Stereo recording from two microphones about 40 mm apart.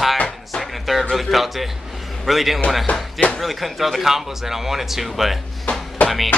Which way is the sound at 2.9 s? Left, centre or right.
Left.